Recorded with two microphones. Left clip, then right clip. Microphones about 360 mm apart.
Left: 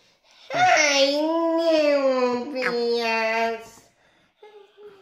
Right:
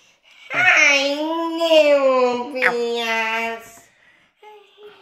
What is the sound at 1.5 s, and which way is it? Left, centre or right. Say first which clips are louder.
Baby cry: right 8 dB; centre.